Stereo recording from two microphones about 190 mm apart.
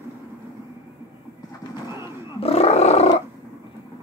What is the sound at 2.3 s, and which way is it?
Roaring cats, 30° left (ahead or behind).